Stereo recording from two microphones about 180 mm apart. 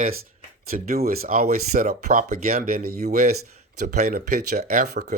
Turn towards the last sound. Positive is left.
turn(degrees=-55)  # may be behind; listen again after turning